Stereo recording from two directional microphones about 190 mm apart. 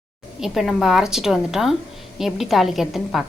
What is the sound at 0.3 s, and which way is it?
A woman's voice, centre (ahead or behind).